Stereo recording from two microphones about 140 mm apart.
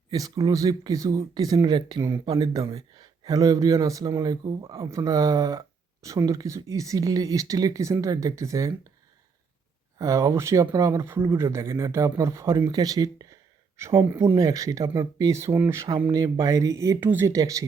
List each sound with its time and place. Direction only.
0.1 s speech: 25° right (ahead or behind)
10.0 s speech: 20° right (ahead or behind)